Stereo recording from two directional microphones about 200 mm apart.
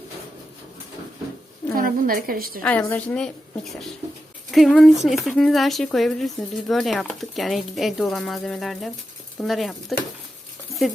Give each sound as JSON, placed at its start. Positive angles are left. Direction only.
{"t": 1.7, "sound": "a woman's voice", "side_deg": -45}
{"t": 2.6, "sound": "a woman's voice", "side_deg": 10}